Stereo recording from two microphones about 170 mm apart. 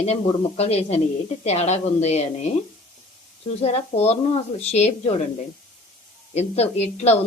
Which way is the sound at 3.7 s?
40° left (ahead or behind).